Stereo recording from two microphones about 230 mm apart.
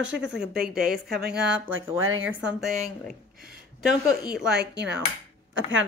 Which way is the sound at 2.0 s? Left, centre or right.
Right.